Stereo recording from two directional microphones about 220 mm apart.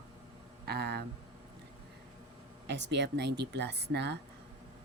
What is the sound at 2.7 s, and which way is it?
A woman's voice, 50° right (ahead or behind).